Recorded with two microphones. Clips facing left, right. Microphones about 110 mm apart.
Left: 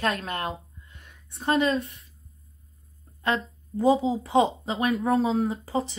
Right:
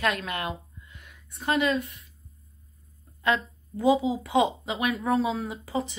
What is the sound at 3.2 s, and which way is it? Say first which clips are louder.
Speech: right 1 dB; 35° left (ahead or behind).